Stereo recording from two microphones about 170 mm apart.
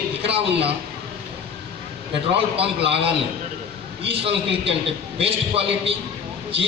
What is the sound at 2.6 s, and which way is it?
A man's voice, 35° right (ahead or behind).